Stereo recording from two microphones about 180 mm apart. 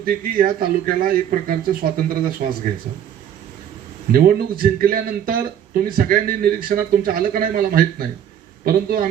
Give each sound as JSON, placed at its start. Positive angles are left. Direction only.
{"t": 0.0, "sound": "speech", "side_deg": -55}
{"t": 4.1, "sound": "speech", "side_deg": -55}